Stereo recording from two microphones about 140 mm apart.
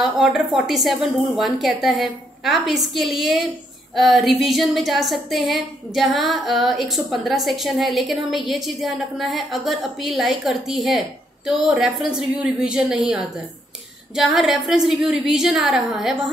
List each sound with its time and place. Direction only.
0.0 s a woman's voice: centre (ahead or behind)